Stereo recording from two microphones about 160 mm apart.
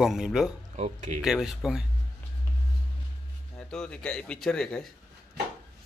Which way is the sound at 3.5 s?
5° left (ahead or behind).